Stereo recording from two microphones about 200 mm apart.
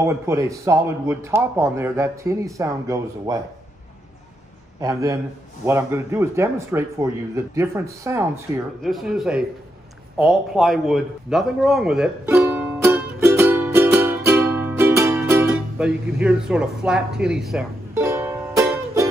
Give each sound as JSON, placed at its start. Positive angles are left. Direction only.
{"t": 0.0, "sound": "a man's voice", "side_deg": -15}
{"t": 4.7, "sound": "a man's voice", "side_deg": -15}
{"t": 8.8, "sound": "a man's voice", "side_deg": 0}
{"t": 12.4, "sound": "music", "side_deg": -5}
{"t": 17.9, "sound": "music", "side_deg": -15}